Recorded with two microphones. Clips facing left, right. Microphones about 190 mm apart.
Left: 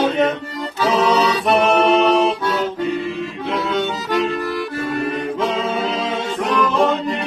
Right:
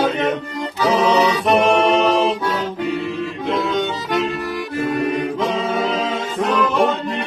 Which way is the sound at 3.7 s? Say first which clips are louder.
Even; 15° right (ahead or behind).